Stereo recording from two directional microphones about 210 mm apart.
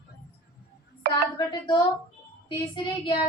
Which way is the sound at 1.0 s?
45° right (ahead or behind).